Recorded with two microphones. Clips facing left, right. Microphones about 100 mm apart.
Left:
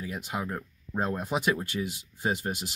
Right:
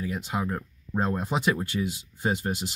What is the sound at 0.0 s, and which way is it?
Speech, 5° left (ahead or behind).